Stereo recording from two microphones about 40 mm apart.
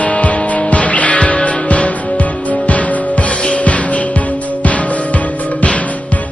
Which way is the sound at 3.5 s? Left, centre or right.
Left.